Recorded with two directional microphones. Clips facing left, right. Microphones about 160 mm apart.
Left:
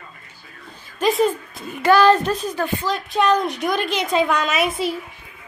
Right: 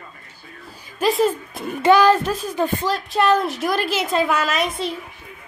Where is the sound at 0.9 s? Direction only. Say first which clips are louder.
Even; centre (ahead or behind); by 2.9 s 15° right (ahead or behind).